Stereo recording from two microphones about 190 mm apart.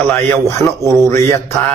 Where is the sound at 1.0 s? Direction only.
15° left (ahead or behind).